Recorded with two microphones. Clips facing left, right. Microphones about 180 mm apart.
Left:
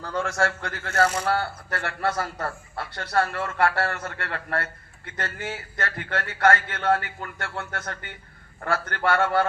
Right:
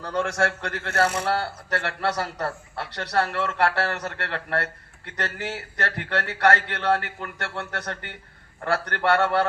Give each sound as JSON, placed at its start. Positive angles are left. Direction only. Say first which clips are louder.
{"t": 0.2, "sound": "a man's voice", "louder": "right 1 dB", "side_deg": -65}